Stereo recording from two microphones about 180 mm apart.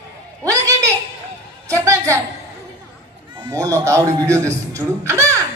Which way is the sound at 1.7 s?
15° right (ahead or behind).